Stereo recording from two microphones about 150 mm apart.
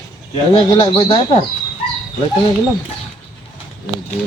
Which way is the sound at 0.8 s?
35° left (ahead or behind).